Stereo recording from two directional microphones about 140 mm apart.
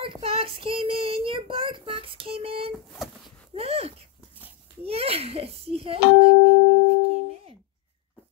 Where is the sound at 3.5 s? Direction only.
45° right (ahead or behind).